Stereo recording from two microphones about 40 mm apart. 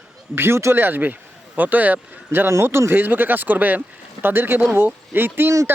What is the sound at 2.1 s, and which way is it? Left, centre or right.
A man's voice, right.